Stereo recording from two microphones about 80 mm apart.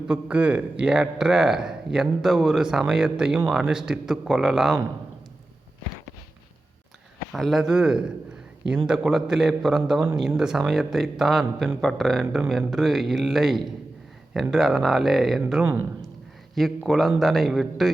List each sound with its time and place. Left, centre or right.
0.1 s speech: centre
7.3 s speech: centre
12.2 s speech: centre
15.6 s speech: right
16.6 s speech: centre